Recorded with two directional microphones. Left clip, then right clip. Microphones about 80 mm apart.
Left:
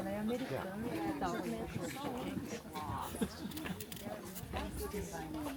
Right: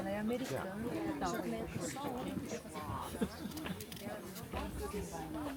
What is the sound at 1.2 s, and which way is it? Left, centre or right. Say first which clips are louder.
Speech: even; left.